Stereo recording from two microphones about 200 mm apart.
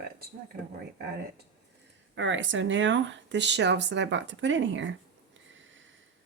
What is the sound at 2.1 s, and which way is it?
Speech, 70° right (ahead or behind).